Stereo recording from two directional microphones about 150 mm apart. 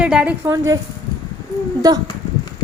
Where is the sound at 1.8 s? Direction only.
25° right (ahead or behind).